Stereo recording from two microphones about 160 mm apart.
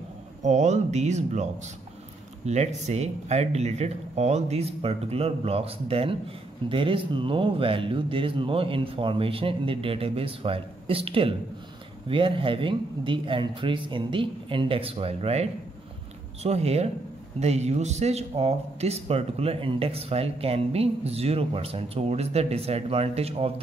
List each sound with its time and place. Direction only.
0.4 s speech: 50° right (ahead or behind)
16.4 s speech: 40° right (ahead or behind)